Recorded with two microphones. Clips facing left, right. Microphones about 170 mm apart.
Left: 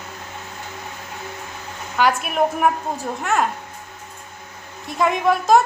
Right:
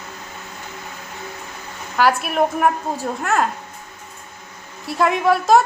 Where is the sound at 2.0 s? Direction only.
5° right (ahead or behind).